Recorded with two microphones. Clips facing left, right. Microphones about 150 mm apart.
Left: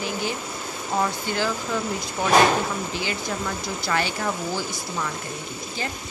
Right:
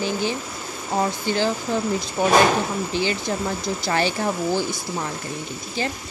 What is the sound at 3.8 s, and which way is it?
Speech, 30° right (ahead or behind).